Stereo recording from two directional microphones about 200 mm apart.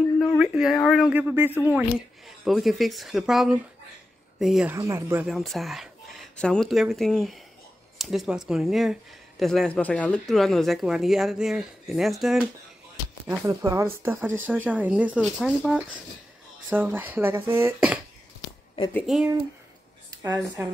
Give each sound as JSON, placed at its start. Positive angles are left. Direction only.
{"t": 0.4, "sound": "speech", "side_deg": 0}
{"t": 4.7, "sound": "speech", "side_deg": -15}
{"t": 5.2, "sound": "speech", "side_deg": 0}
{"t": 13.3, "sound": "speech", "side_deg": -15}
{"t": 20.1, "sound": "speech", "side_deg": -20}